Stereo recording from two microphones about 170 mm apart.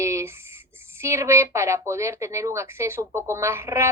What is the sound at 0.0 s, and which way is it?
Speech, 15° right (ahead or behind).